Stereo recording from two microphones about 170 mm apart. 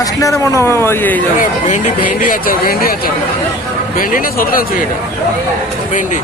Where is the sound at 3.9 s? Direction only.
55° left (ahead or behind).